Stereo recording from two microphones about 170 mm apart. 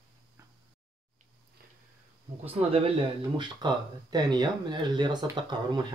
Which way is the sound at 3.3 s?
25° right (ahead or behind).